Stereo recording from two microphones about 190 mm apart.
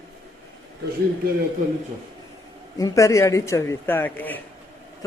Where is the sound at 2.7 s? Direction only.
15° left (ahead or behind).